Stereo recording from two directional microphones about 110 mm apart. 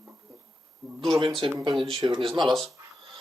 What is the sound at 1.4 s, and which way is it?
Speech, 45° right (ahead or behind).